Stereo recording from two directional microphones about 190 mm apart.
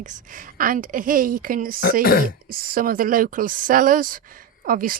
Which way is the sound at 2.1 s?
55° left (ahead or behind).